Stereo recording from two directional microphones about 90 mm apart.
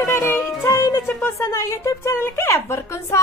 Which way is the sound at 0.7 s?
40° left (ahead or behind).